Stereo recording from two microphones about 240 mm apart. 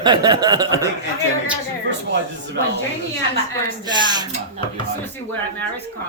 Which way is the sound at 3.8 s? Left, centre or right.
Centre.